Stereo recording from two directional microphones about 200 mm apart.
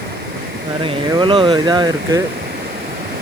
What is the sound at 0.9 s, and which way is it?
Speech, 25° right (ahead or behind).